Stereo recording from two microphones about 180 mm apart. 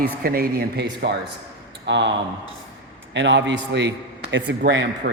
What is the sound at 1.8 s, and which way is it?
A man's voice, 80° right.